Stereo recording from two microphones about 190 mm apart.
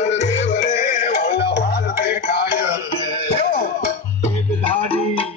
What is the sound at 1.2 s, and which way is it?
Music, 60° left (ahead or behind).